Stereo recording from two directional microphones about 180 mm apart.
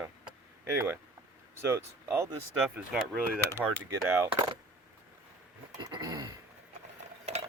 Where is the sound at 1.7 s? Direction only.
15° right (ahead or behind).